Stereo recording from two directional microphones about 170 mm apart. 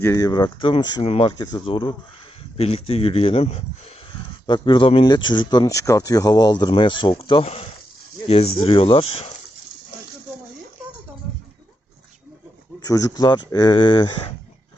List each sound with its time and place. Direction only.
0.0 s speech: 20° left (ahead or behind)
12.8 s speech: 20° left (ahead or behind)